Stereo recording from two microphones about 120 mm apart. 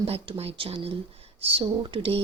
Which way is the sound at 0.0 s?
50° right (ahead or behind).